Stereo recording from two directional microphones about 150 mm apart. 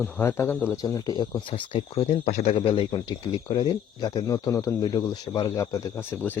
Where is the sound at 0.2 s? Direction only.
15° left (ahead or behind).